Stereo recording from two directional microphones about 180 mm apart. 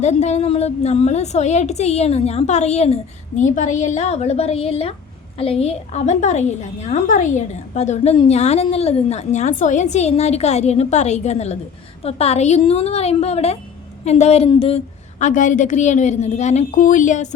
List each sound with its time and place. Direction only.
0.0 s a woman's voice: 40° left (ahead or behind)
15.2 s a woman's voice: 45° left (ahead or behind)